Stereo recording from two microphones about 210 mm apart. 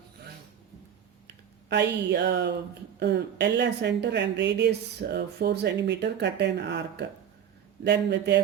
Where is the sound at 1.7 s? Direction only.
55° right (ahead or behind).